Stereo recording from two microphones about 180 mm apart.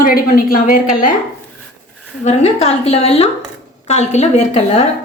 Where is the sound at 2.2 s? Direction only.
35° left (ahead or behind).